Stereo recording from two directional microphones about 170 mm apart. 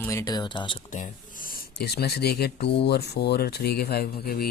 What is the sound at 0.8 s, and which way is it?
Speech, 50° left (ahead or behind).